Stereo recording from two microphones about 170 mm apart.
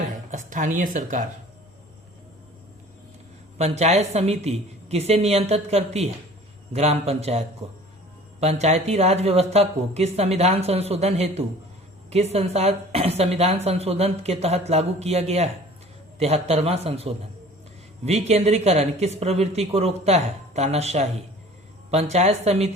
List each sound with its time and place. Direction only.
0.3 s speech: 50° right (ahead or behind)
3.6 s speech: 40° right (ahead or behind)
22.1 s speech: 40° right (ahead or behind)